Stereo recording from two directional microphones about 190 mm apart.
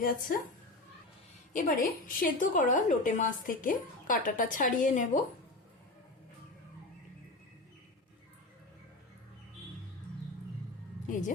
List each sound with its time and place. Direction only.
0.0 s a woman's voice: 50° left (ahead or behind)
1.5 s a woman's voice: 45° left (ahead or behind)